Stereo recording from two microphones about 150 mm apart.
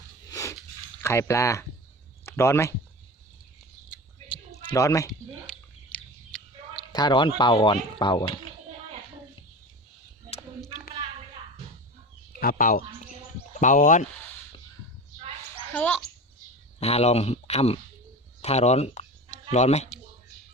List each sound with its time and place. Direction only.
0.3 s a sound: 20° left (ahead or behind)
1.0 s speech: 20° left (ahead or behind)
4.7 s speech: 20° left (ahead or behind)
5.5 s bird: 5° left (ahead or behind)
6.9 s speech: 30° left (ahead or behind)
12.4 s speech: 70° left (ahead or behind)
15.7 s a child's voice: 10° left (ahead or behind)
16.8 s speech: 45° left (ahead or behind)